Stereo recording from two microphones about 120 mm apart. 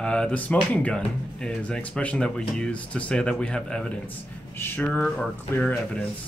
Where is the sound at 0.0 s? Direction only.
10° left (ahead or behind).